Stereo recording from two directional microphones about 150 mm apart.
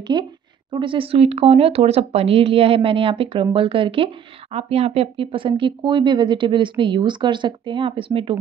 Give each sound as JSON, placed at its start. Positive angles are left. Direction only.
{"t": 0.1, "sound": "speech", "side_deg": -30}